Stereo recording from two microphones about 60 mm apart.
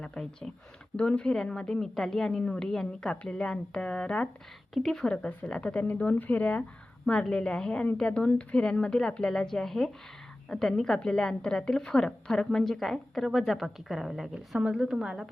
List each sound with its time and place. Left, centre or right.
0.0 s a woman's voice: centre
4.7 s a woman's voice: centre
5.0 s a woman's voice: centre